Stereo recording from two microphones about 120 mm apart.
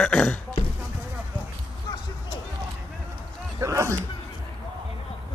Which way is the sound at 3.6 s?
25° right (ahead or behind).